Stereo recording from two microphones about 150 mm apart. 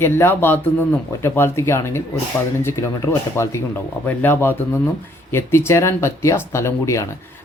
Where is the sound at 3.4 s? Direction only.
20° left (ahead or behind).